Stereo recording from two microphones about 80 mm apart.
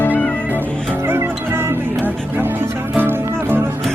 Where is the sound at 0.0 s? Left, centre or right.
Centre.